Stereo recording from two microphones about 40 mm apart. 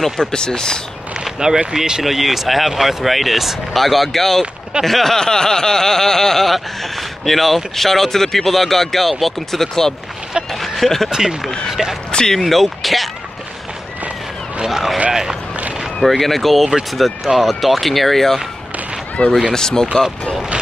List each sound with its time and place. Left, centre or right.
0.2 s a sound: centre
1.2 s a sound: centre
1.7 s speech: centre
2.0 s speech: centre
4.8 s a sound: centre
11.1 s speech: centre
12.1 s speech: centre
12.4 s speech: centre
14.7 s speech: centre
15.0 s speech: centre
16.0 s speech: centre
19.2 s speech: left
19.5 s a sound: centre